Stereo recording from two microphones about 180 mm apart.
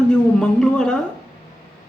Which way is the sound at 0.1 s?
5° left (ahead or behind).